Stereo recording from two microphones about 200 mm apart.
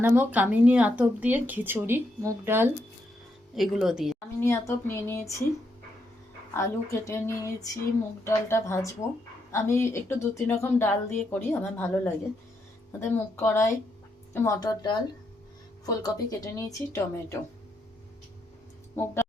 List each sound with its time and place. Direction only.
0.0 s speech: 10° right (ahead or behind)
4.4 s speech: 15° left (ahead or behind)
6.5 s a woman's voice: 15° left (ahead or behind)
19.0 s speech: 10° left (ahead or behind)